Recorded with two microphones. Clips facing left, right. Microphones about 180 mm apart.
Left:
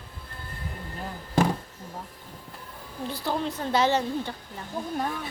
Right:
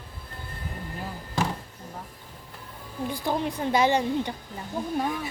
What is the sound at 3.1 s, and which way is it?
A woman's voice, 15° right (ahead or behind).